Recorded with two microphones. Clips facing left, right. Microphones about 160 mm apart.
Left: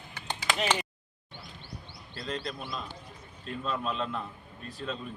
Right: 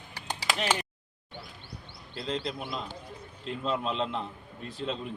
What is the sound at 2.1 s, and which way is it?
A man's voice, 20° right (ahead or behind).